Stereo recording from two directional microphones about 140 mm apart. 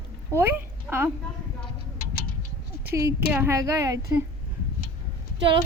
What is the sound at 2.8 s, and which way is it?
A woman's voice, 20° right (ahead or behind).